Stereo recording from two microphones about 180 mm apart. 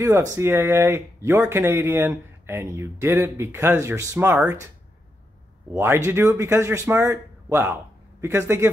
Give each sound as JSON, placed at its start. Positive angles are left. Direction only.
{"t": 0.0, "sound": "speech", "side_deg": -15}
{"t": 5.7, "sound": "a man's voice", "side_deg": -15}